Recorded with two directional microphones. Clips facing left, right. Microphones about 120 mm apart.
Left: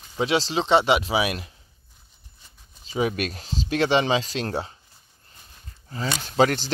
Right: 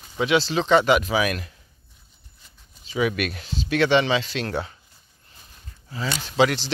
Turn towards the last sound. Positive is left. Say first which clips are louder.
# even
turn(degrees=40)  # may be behind; listen again after turning